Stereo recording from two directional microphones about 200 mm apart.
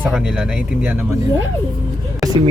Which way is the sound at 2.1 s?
20° right (ahead or behind).